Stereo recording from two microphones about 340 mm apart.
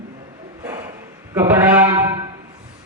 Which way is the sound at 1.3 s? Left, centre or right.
Centre.